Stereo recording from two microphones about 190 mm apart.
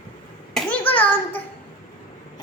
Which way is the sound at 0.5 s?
10° left (ahead or behind).